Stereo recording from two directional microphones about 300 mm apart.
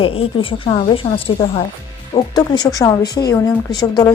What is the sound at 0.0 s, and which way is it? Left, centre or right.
Speech, centre.